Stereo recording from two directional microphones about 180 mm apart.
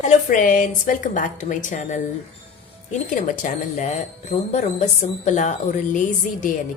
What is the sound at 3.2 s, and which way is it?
Speech, 45° left (ahead or behind).